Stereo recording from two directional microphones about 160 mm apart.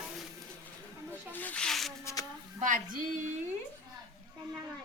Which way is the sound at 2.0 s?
20° left (ahead or behind).